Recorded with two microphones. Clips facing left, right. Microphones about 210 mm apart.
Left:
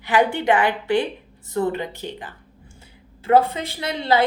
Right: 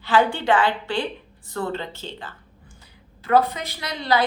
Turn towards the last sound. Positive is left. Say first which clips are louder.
# left 2 dB
turn(degrees=25)  # may be behind; listen again after turning